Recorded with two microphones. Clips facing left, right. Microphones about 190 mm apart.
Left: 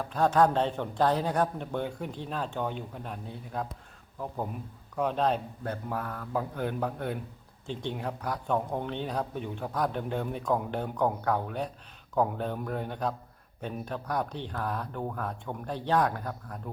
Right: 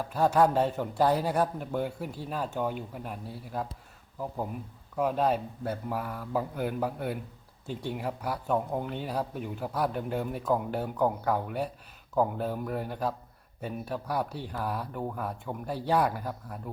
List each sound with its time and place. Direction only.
0.0 s speech: 10° right (ahead or behind)
4.9 s speech: 5° right (ahead or behind)